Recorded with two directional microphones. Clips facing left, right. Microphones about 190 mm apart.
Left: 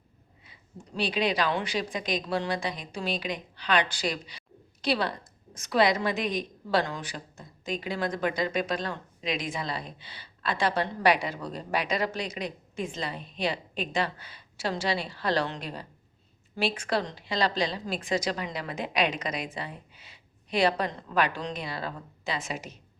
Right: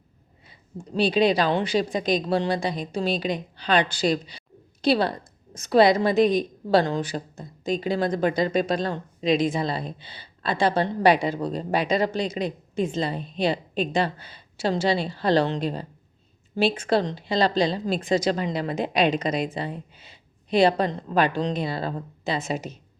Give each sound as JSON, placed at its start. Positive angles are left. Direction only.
{"t": 0.9, "sound": "a woman's voice", "side_deg": -30}